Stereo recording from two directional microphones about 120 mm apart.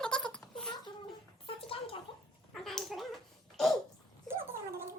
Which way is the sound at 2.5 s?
5° left (ahead or behind).